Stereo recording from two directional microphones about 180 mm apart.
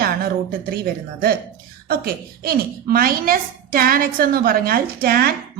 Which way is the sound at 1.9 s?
55° right (ahead or behind).